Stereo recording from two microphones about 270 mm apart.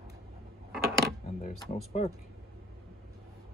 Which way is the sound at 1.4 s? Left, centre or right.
Left.